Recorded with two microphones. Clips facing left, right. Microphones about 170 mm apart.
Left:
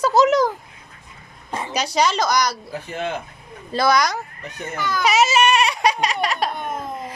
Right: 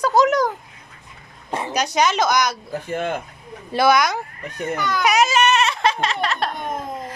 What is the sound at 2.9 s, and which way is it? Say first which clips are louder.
Speech: right 3 dB; 50° right (ahead or behind).